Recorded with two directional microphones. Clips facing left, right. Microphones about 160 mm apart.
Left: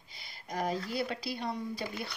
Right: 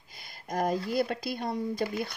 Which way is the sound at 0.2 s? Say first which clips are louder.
Right 5 dB; 45° right (ahead or behind).